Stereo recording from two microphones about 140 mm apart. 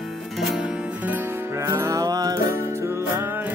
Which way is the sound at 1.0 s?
15° right (ahead or behind).